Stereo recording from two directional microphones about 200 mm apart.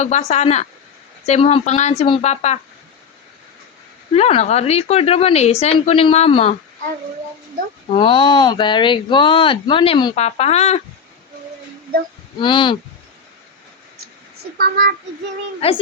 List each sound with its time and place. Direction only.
0.0 s speech: 35° left (ahead or behind)
4.1 s speech: 30° left (ahead or behind)
7.9 s speech: 25° left (ahead or behind)
12.4 s speech: 25° left (ahead or behind)
14.6 s speech: 50° right (ahead or behind)
15.6 s speech: 30° left (ahead or behind)